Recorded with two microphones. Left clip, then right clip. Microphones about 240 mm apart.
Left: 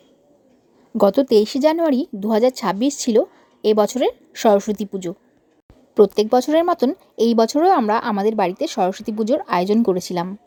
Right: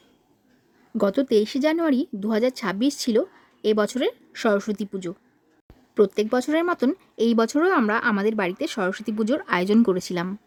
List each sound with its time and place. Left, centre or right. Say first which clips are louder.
0.9 s speech: left 6 dB; centre